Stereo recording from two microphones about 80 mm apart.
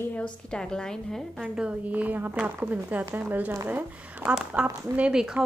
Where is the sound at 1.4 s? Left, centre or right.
Centre.